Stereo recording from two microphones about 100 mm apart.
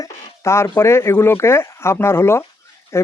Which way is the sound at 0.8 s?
25° left (ahead or behind).